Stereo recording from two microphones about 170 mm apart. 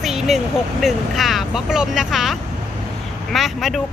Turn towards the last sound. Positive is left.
turn(degrees=0)  # may be behind; listen again after turning